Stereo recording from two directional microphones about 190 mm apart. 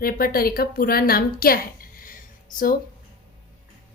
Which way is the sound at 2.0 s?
45° left (ahead or behind).